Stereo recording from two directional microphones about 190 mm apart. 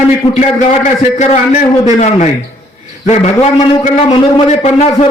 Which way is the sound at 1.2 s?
35° left (ahead or behind).